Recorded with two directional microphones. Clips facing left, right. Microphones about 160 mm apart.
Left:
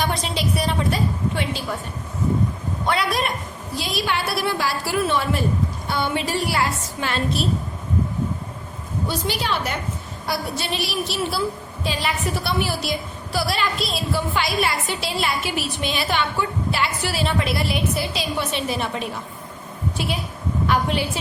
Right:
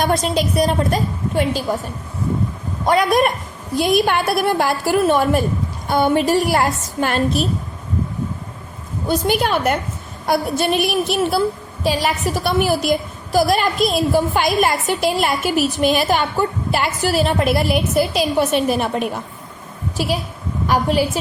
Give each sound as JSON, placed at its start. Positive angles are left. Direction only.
{"t": 0.0, "sound": "a woman's voice", "side_deg": -45}
{"t": 2.8, "sound": "a woman's voice", "side_deg": -45}
{"t": 9.0, "sound": "a woman's voice", "side_deg": -50}
{"t": 20.7, "sound": "a woman's voice", "side_deg": -40}